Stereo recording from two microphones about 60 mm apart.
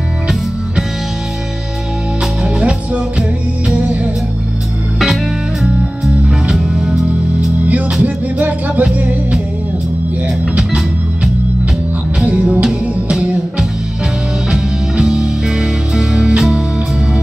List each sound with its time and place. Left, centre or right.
2.4 s music: centre
4.9 s music: centre
7.6 s music: right
12.3 s music: right